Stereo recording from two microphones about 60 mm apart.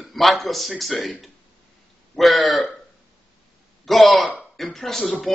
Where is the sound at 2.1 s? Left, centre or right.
Centre.